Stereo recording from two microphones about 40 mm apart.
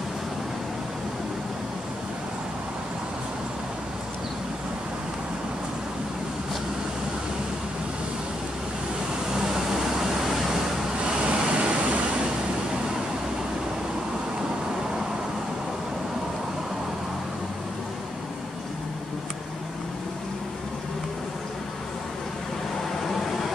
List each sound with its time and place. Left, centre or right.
9.3 s vehicle: centre
11.1 s vehicle: right
23.0 s vehicle: centre